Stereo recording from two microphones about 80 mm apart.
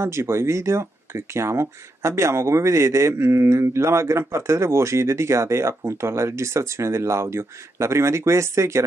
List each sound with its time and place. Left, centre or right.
0.0 s speech: right